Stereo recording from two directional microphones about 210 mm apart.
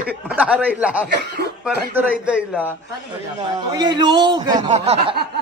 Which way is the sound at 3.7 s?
20° right (ahead or behind).